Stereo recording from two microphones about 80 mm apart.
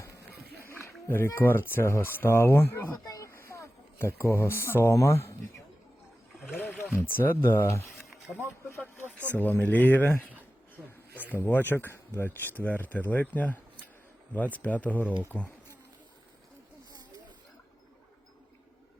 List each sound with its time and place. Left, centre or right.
0.7 s speech: left
3.1 s a sound: left
4.7 s speech: left
6.9 s speech: left
9.1 s speech: centre
11.3 s speech: left